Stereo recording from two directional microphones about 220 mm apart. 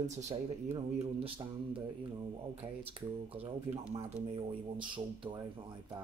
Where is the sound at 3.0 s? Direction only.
25° right (ahead or behind).